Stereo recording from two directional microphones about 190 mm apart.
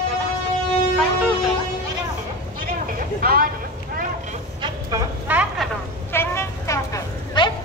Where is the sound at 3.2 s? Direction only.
50° right (ahead or behind).